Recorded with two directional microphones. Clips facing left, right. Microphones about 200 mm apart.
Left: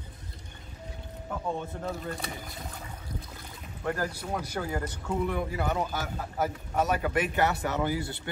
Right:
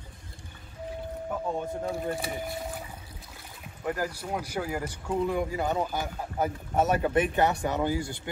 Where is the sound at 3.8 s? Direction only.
10° right (ahead or behind).